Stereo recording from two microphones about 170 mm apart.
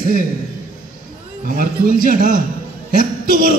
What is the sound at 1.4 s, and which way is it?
A man's voice, 55° right (ahead or behind).